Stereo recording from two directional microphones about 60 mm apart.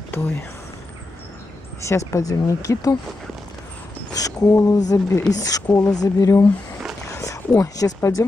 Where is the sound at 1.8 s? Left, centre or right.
Left.